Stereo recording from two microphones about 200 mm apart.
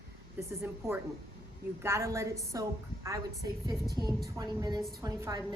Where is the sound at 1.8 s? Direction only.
15° right (ahead or behind).